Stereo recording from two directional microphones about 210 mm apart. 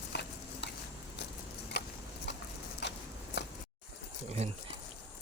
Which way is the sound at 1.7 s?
50° left (ahead or behind).